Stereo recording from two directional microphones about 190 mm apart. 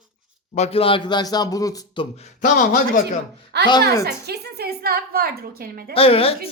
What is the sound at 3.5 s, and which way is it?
A woman's voice, 60° right (ahead or behind).